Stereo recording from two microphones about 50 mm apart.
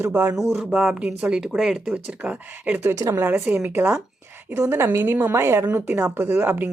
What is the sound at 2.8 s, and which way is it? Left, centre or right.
Speech, right.